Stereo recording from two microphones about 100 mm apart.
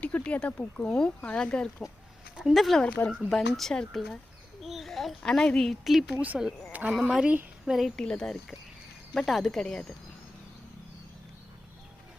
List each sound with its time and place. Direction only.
0.0 s speech: 15° left (ahead or behind)
2.3 s speech: 5° right (ahead or behind)
2.8 s speech: 10° left (ahead or behind)
6.1 s speech: 15° right (ahead or behind)
6.7 s a sound: 10° right (ahead or behind)
6.9 s speech: 5° right (ahead or behind)